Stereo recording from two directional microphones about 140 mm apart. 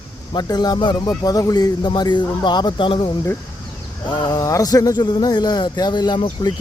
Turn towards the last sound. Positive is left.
turn(degrees=30)  # may be behind; listen again after turning